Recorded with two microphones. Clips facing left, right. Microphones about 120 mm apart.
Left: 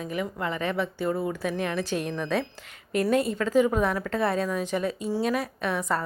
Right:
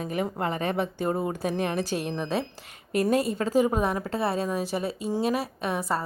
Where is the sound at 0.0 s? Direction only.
40° right (ahead or behind).